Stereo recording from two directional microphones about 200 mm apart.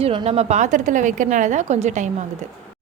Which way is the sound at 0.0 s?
25° right (ahead or behind).